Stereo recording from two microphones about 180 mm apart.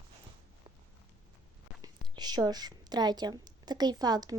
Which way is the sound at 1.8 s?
25° right (ahead or behind).